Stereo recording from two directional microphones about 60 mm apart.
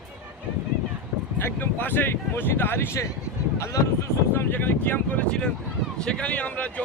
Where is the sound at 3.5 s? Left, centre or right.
Left.